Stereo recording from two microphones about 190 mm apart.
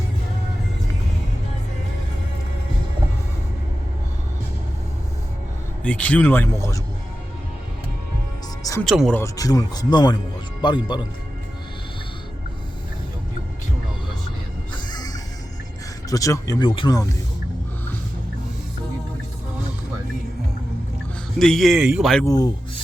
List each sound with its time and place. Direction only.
5.8 s speech: 5° left (ahead or behind)
8.8 s speech: centre (ahead or behind)
9.1 s speech: 15° left (ahead or behind)
14.7 s music: 20° left (ahead or behind)
16.0 s speech: 15° left (ahead or behind)
21.3 s speech: centre (ahead or behind)
22.2 s speech: 20° left (ahead or behind)